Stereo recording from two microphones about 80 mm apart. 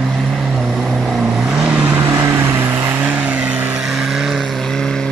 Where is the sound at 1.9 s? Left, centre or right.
Right; by 3.8 s centre.